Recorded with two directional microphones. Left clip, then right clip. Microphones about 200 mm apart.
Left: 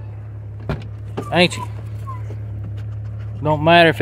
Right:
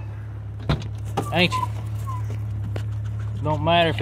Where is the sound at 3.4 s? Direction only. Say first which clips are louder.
Left 7 dB; 45° left (ahead or behind).